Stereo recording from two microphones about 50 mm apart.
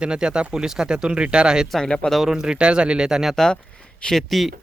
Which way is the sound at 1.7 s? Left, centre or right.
Centre.